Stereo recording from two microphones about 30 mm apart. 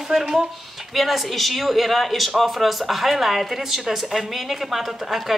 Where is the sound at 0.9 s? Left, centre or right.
Centre.